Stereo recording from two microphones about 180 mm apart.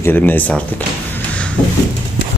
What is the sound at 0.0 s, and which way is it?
Speech, 10° left (ahead or behind).